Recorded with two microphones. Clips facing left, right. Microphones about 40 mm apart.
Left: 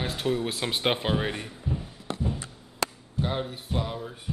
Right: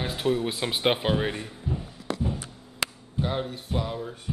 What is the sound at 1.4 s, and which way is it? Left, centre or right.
Music, centre.